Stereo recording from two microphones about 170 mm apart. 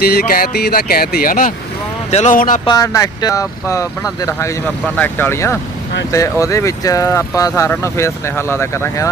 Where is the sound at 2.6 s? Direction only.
20° left (ahead or behind).